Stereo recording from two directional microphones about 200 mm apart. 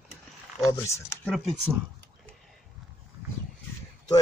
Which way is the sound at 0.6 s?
15° left (ahead or behind).